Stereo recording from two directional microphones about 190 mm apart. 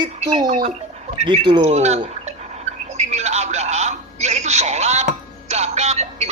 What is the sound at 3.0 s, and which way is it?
Music, 35° right (ahead or behind).